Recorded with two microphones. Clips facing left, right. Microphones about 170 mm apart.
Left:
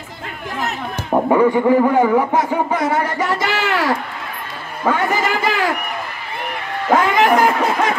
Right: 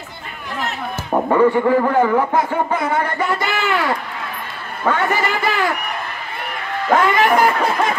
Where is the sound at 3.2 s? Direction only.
90° left.